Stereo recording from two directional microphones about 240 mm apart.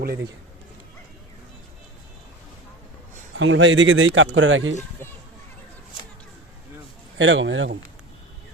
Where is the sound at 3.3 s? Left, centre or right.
Right.